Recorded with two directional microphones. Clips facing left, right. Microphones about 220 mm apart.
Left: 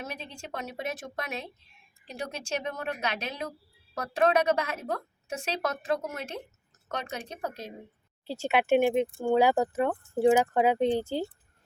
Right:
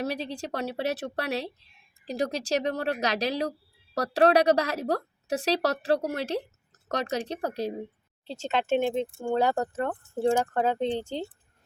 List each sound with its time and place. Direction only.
0.0 s a woman's voice: 35° right (ahead or behind)
8.3 s speech: 10° left (ahead or behind)